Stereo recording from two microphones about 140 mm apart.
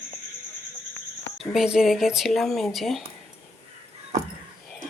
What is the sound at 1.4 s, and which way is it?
Speech, centre (ahead or behind).